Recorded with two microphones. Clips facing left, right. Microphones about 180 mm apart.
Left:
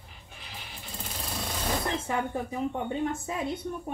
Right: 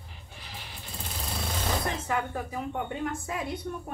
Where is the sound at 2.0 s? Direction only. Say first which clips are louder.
Left 1 dB; 25° left (ahead or behind).